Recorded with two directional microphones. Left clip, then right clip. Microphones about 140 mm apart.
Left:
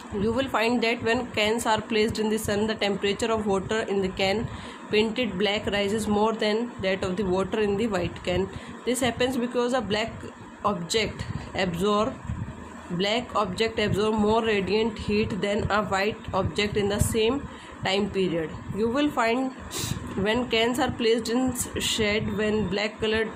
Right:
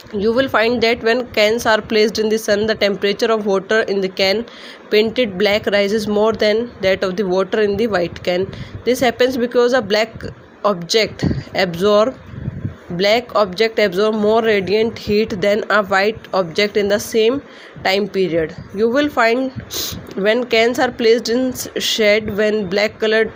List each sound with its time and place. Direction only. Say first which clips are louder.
0.2 s speech: right 10 dB; 45° right (ahead or behind)
13.0 s speech: right 11 dB; 50° right (ahead or behind)
19.4 s speech: right 8 dB; 35° right (ahead or behind)
20.2 s speech: right 10 dB; 50° right (ahead or behind)